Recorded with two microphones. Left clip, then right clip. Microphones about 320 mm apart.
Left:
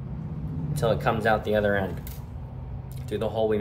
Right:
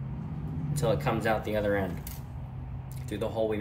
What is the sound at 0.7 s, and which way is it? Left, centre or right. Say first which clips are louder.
Speech: left 4 dB; centre.